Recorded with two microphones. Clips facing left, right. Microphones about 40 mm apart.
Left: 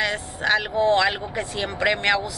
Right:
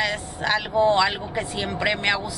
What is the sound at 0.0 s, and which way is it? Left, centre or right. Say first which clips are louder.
Speech: left 1 dB; centre.